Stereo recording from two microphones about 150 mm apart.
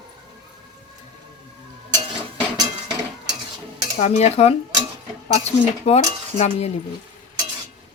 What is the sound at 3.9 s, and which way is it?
Speech, 45° left (ahead or behind).